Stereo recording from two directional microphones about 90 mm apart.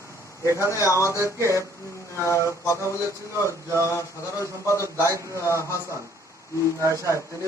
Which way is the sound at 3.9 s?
35° left (ahead or behind).